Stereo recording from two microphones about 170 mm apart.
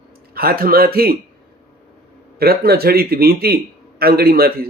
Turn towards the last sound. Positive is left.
turn(degrees=-65)  # may be behind; listen again after turning